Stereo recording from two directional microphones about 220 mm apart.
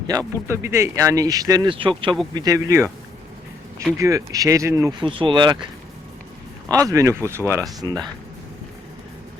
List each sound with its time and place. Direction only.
0.1 s speech: 10° right (ahead or behind)
3.9 s speech: 15° right (ahead or behind)
6.7 s speech: 15° right (ahead or behind)